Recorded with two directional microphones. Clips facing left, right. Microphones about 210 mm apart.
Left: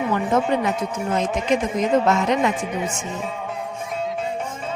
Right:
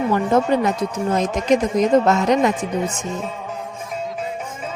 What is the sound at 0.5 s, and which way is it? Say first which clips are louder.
A woman's voice: right 3 dB; 40° right (ahead or behind).